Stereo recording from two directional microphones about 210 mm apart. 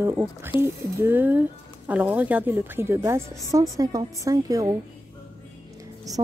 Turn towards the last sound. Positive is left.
turn(degrees=-15)  # may be behind; listen again after turning